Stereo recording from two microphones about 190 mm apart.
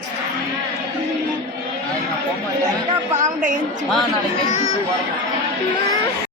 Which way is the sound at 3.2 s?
45° right (ahead or behind).